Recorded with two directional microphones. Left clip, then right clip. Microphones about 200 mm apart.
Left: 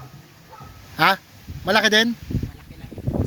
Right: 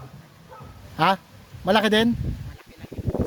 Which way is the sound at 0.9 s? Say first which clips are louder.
Left 3 dB; 15° right (ahead or behind).